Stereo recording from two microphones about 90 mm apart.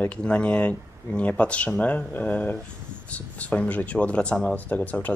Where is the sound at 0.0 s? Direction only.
15° left (ahead or behind).